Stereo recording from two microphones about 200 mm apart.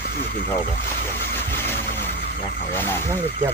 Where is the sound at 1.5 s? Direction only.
10° left (ahead or behind).